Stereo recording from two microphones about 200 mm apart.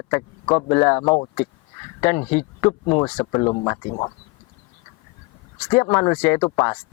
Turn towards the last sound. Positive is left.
turn(degrees=15)  # may be behind; listen again after turning